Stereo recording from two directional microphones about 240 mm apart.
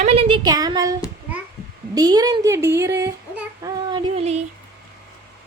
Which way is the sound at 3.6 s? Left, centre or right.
Centre.